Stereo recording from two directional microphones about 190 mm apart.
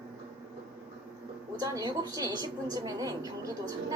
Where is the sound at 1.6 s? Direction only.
20° right (ahead or behind).